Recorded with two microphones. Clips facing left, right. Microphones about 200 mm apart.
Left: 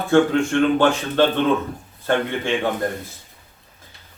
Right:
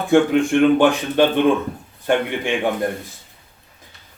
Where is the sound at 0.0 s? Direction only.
15° right (ahead or behind).